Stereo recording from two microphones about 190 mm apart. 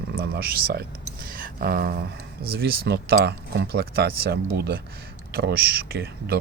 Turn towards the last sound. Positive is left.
turn(degrees=-55)  # may be behind; listen again after turning